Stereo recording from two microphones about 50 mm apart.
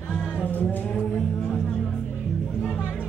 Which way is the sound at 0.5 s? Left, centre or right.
Left.